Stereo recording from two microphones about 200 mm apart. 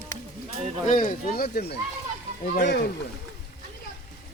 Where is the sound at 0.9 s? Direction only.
40° left (ahead or behind); by 2.9 s 55° left (ahead or behind).